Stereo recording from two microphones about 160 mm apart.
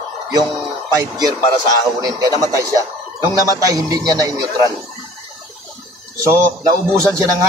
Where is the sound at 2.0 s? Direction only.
20° right (ahead or behind).